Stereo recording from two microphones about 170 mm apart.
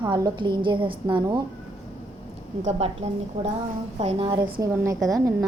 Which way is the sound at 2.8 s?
40° right (ahead or behind).